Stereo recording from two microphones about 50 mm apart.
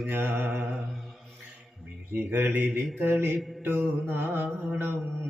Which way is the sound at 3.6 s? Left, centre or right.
Right.